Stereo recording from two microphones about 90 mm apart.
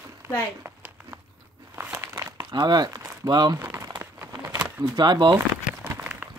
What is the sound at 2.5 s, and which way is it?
Speech, 50° right (ahead or behind).